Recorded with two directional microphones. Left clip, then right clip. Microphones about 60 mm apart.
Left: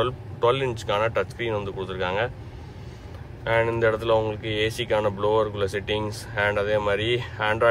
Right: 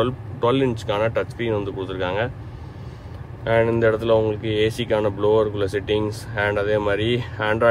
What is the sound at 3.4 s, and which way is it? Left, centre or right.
Speech, centre.